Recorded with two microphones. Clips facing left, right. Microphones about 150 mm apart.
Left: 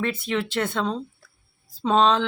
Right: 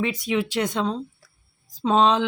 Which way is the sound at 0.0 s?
10° right (ahead or behind).